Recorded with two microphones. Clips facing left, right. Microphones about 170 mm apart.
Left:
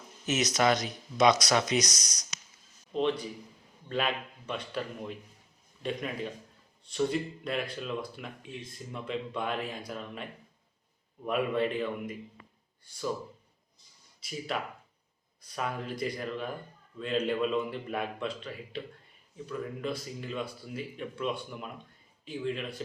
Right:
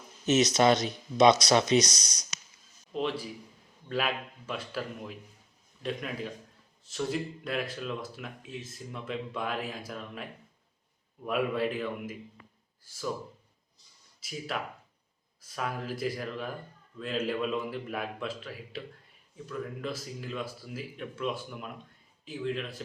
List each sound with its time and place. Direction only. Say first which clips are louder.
0.3 s speech: right 4 dB; 25° right (ahead or behind)
2.9 s speech: left 3 dB; 5° right (ahead or behind)
11.3 s speech: even; centre (ahead or behind)
14.2 s speech: left 1 dB; centre (ahead or behind)